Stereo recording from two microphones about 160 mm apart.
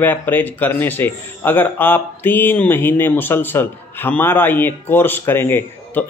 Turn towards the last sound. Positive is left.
turn(degrees=15)  # may be behind; listen again after turning